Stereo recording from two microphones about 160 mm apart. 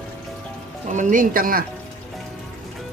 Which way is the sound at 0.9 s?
55° right (ahead or behind).